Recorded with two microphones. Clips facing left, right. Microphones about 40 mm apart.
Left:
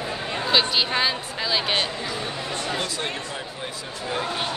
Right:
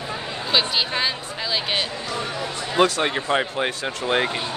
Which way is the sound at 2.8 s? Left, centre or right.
Right.